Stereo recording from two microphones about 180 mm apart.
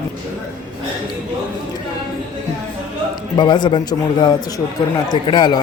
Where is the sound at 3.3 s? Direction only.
25° left (ahead or behind).